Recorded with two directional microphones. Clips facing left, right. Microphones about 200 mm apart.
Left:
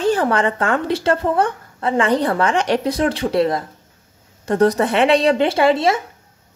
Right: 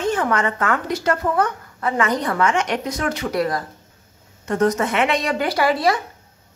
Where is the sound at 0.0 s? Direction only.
35° left (ahead or behind).